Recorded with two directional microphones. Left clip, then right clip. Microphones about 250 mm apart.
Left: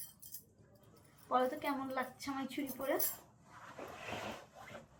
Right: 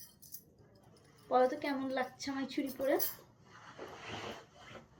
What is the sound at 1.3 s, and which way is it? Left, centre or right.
A woman's voice, centre.